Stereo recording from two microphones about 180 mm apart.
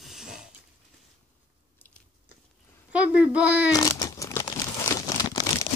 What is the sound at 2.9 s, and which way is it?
Speech, 5° right (ahead or behind).